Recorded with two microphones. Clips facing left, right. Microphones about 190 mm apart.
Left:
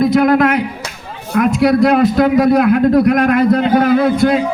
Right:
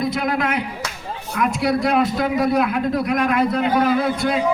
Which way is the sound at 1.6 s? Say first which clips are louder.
Left 8 dB; 90° left.